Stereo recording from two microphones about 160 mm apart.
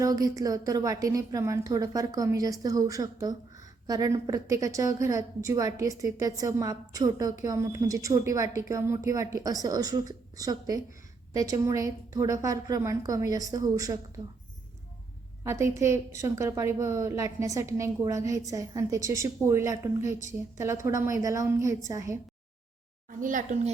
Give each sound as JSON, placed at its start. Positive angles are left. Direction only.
{"t": 0.0, "sound": "a woman's voice", "side_deg": -20}
{"t": 15.4, "sound": "a woman's voice", "side_deg": -15}
{"t": 23.0, "sound": "a woman's voice", "side_deg": -55}